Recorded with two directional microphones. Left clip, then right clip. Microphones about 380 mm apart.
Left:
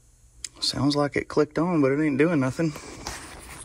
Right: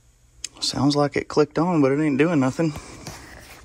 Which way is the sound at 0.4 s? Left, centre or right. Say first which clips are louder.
Right 3 dB; centre.